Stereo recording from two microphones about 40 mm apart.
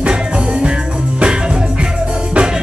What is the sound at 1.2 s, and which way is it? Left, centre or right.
Music, right.